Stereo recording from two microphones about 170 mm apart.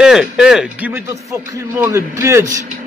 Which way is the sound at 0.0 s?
5° right (ahead or behind).